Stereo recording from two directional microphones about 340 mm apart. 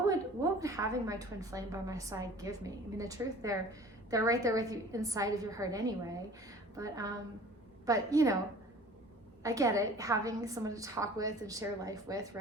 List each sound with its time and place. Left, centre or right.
0.6 s a woman's voice: centre
9.4 s a woman's voice: centre